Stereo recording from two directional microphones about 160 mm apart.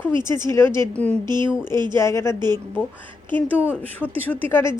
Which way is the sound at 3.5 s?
10° right (ahead or behind).